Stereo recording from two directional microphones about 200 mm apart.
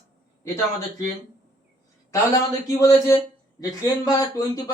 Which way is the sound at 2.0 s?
15° left (ahead or behind).